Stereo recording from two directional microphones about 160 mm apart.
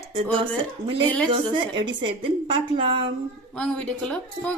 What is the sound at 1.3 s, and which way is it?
A woman's voice, 30° right (ahead or behind).